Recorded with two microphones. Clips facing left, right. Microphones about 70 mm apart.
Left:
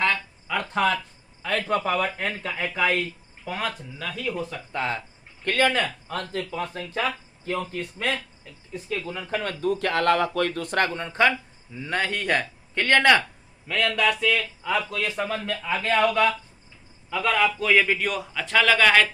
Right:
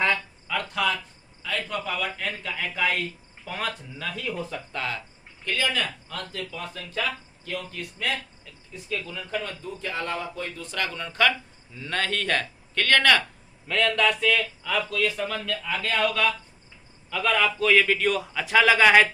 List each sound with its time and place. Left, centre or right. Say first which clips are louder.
0.7 s speech: left 4 dB; left
1.4 s a man's voice: left 6 dB; left
3.4 s a man's voice: left 2 dB; centre
4.7 s speech: left 5 dB; left
5.5 s speech: left 5 dB; left
10.8 s speech: right 1 dB; left
13.7 s speech: even; centre
14.6 s speech: even; left
17.1 s a man's voice: left 1 dB; centre